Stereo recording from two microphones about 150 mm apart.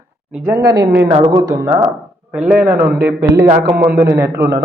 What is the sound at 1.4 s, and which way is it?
Speech, 15° right (ahead or behind).